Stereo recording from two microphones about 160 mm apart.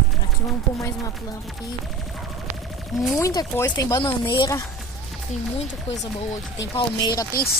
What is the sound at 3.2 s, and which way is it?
Speech, 20° left (ahead or behind).